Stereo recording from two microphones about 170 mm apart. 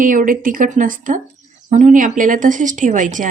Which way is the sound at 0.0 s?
50° right (ahead or behind).